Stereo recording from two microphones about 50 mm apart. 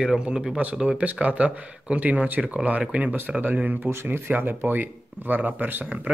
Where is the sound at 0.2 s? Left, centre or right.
Centre.